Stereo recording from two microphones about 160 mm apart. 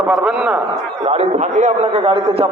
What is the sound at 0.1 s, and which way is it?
Speech, 5° right (ahead or behind).